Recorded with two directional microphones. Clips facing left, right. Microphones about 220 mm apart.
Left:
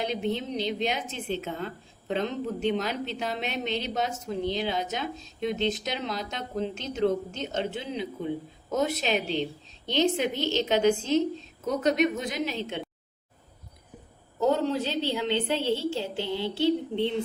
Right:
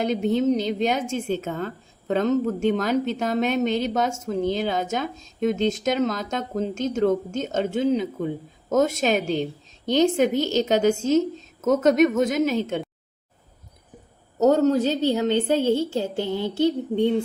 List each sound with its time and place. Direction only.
0.0 s a woman's voice: 45° right (ahead or behind)
14.3 s a woman's voice: 45° right (ahead or behind)